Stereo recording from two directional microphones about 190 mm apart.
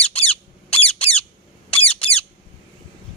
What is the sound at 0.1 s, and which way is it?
Squeak, 30° left (ahead or behind).